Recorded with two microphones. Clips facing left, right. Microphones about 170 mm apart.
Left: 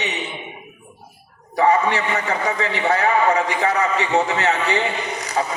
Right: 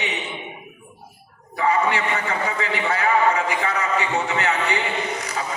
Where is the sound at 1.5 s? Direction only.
35° left (ahead or behind).